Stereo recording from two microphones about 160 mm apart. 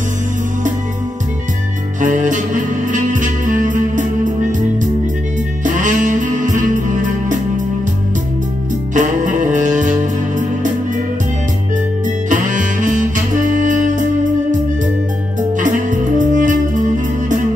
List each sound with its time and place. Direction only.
2.0 s music: 50° right (ahead or behind)
5.6 s music: 50° right (ahead or behind)
8.9 s music: 50° right (ahead or behind)
12.3 s saxophone: 50° right (ahead or behind)
15.5 s music: 50° right (ahead or behind)